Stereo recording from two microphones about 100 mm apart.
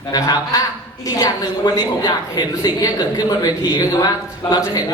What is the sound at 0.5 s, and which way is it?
A man's voice, 35° left (ahead or behind).